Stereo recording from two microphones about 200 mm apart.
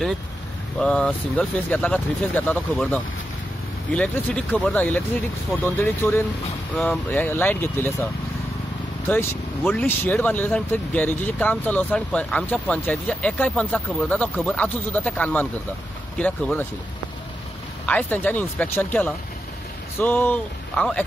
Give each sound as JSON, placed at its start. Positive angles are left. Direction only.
{"t": 0.7, "sound": "speech", "side_deg": 5}
{"t": 9.1, "sound": "speech", "side_deg": 10}
{"t": 17.8, "sound": "speech", "side_deg": 10}